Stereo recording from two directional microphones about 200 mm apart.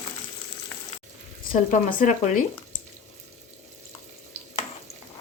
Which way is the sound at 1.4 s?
45° left (ahead or behind).